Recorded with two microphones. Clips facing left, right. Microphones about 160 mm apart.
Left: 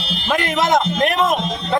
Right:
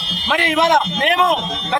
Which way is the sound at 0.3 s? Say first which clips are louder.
Right 2 dB; centre (ahead or behind).